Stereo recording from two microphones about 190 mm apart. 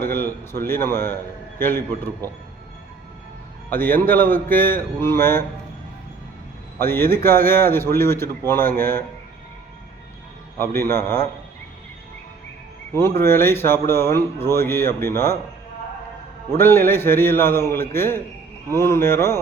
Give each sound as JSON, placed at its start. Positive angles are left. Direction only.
{"t": 0.1, "sound": "a sound", "side_deg": 10}
{"t": 0.6, "sound": "speech", "side_deg": 10}
{"t": 3.7, "sound": "speech", "side_deg": 10}
{"t": 6.7, "sound": "speech", "side_deg": 10}
{"t": 10.6, "sound": "speech", "side_deg": 10}
{"t": 12.9, "sound": "speech", "side_deg": 15}
{"t": 16.6, "sound": "speech", "side_deg": 10}